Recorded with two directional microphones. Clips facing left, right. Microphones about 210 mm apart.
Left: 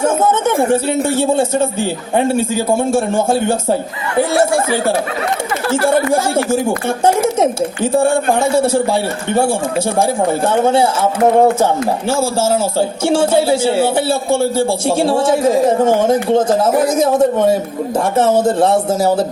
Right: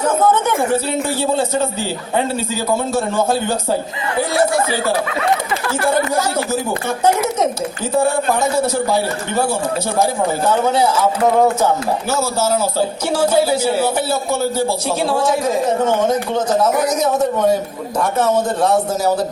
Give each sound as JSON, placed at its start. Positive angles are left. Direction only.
{"t": 0.0, "sound": "a man's voice", "side_deg": 25}
{"t": 2.4, "sound": "a man's voice", "side_deg": 50}
{"t": 3.2, "sound": "a man's voice", "side_deg": 25}